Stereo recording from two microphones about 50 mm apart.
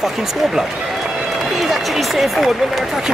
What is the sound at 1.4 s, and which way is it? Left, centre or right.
Run, centre.